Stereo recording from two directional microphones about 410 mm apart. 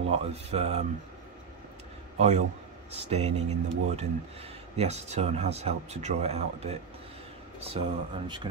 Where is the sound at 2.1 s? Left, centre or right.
Centre.